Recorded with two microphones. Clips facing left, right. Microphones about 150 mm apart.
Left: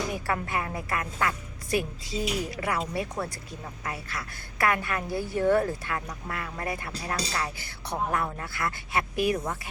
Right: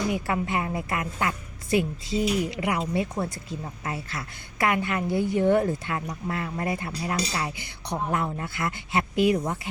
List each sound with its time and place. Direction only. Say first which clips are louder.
0.3 s speech: right 3 dB; 20° right (ahead or behind)